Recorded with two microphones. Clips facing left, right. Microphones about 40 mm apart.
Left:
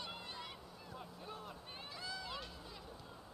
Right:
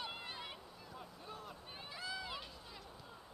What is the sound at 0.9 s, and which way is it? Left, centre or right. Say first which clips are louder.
Boat: left 1 dB; centre.